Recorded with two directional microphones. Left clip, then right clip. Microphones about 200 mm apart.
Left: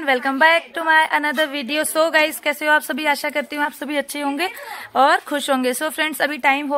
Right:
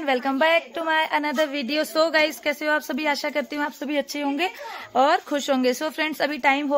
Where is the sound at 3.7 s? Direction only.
15° left (ahead or behind).